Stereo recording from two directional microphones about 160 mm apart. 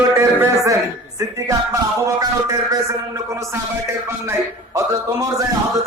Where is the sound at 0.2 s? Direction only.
20° right (ahead or behind).